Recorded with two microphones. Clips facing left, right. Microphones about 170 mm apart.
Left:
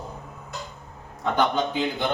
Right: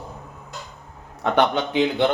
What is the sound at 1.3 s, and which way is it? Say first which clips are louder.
Speech: right 4 dB; 75° right (ahead or behind).